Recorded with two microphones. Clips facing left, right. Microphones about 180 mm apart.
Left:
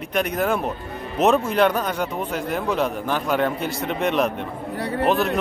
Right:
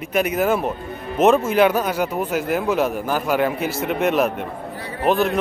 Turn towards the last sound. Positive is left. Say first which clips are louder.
# right 1 dB
turn(degrees=0)  # may be behind; listen again after turning